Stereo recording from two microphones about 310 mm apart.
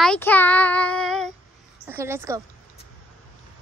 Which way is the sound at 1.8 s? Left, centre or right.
Centre.